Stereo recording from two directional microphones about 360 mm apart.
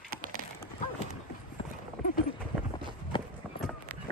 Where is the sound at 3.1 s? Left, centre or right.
Centre.